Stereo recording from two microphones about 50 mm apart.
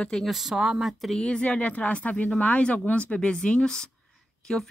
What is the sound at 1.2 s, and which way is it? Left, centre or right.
Speech, left.